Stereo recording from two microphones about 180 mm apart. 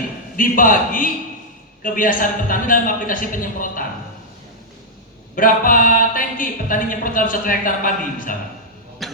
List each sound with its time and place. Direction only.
0.3 s speech: 50° left (ahead or behind)
5.3 s speech: 50° left (ahead or behind)
9.0 s cough: centre (ahead or behind)